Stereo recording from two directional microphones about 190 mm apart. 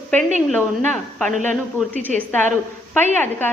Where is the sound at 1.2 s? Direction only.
40° right (ahead or behind).